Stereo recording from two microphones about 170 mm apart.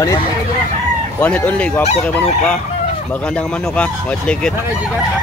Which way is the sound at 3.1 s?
5° left (ahead or behind).